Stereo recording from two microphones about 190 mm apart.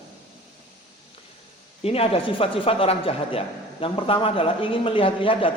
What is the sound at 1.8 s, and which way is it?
Speech, 30° left (ahead or behind).